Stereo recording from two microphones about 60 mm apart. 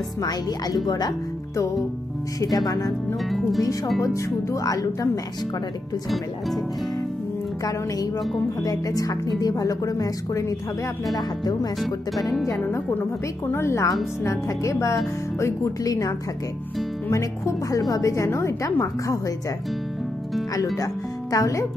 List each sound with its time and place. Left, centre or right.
0.2 s speech: left
2.4 s speech: left
3.3 s speech: centre
4.0 s speech: left
8.6 s speech: left
13.5 s a woman's voice: left
15.8 s speech: left
17.1 s a woman's voice: left
18.1 s a woman's voice: left
20.7 s speech: left